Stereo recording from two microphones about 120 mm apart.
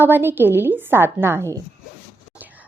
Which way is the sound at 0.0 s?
15° right (ahead or behind).